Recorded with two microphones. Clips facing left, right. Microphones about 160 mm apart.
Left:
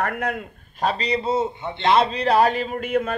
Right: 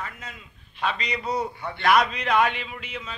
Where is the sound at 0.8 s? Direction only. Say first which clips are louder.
Left 6 dB; 35° left (ahead or behind).